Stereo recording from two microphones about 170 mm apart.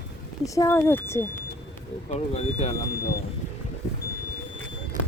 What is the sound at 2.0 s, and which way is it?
Speech, 40° left (ahead or behind).